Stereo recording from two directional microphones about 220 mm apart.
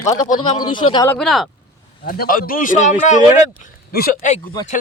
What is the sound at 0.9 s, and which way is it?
Speech, 15° left (ahead or behind).